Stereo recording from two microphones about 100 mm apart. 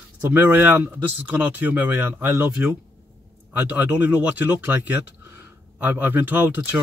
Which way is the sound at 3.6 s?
15° right (ahead or behind).